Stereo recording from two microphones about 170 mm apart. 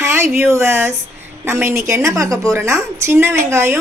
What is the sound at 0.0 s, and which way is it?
A woman's voice, 15° right (ahead or behind).